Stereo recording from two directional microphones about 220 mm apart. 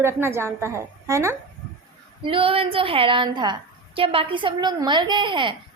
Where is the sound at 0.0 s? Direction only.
10° right (ahead or behind).